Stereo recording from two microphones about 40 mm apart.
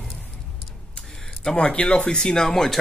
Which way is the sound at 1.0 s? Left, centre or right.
Centre.